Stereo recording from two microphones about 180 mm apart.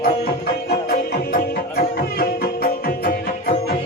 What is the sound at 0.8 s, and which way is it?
Music, 60° left (ahead or behind).